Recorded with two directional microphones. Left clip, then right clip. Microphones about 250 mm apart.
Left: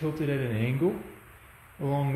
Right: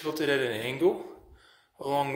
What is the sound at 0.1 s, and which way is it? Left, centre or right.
Speech, centre.